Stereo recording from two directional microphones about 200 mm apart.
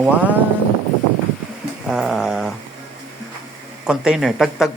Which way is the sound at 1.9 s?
Centre (ahead or behind).